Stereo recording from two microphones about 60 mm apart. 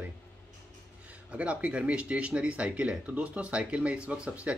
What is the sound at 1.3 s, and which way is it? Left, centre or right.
Speech, right.